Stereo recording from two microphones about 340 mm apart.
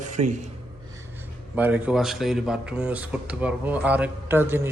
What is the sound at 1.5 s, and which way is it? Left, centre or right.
Speech, centre.